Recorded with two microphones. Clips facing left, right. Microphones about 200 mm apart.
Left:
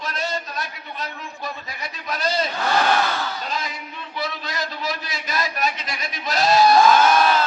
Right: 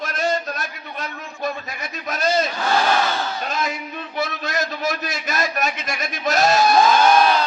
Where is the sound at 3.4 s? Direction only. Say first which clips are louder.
Right 4 dB; 45° right (ahead or behind).